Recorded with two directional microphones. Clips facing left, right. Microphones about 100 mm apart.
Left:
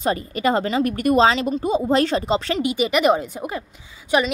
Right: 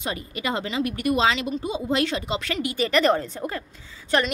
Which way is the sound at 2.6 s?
15° left (ahead or behind).